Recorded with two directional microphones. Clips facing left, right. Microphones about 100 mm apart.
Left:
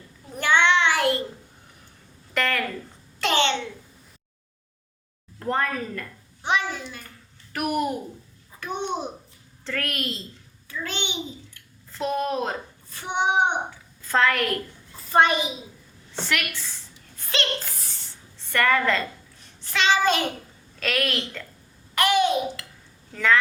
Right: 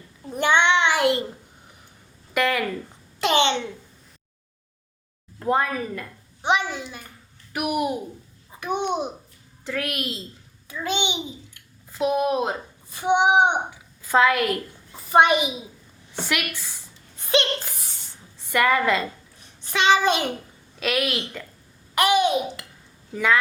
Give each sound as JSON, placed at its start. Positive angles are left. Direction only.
{"t": 0.3, "sound": "child singing", "side_deg": -20}
{"t": 2.3, "sound": "a woman's voice", "side_deg": -10}
{"t": 5.4, "sound": "a child's voice", "side_deg": -10}